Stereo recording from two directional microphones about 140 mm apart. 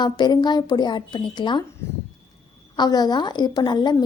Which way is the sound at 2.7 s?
30° left (ahead or behind).